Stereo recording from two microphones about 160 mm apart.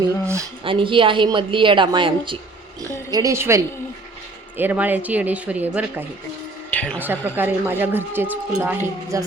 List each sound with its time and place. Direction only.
0.6 s a woman's voice: 30° right (ahead or behind)
2.8 s a woman's voice: 20° right (ahead or behind)
6.7 s music: 10° left (ahead or behind)
7.0 s a woman's voice: 10° right (ahead or behind)